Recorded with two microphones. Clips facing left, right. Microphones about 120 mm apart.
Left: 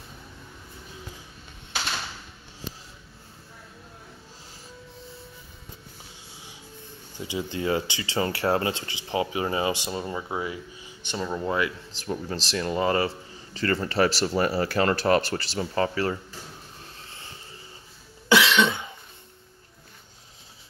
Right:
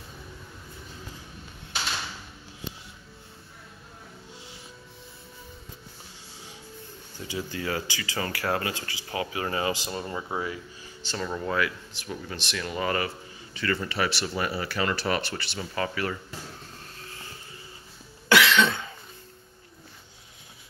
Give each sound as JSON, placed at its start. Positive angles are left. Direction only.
{"t": 7.2, "sound": "speech", "side_deg": 20}
{"t": 12.0, "sound": "a man's voice", "side_deg": 35}
{"t": 18.3, "sound": "cough", "side_deg": 15}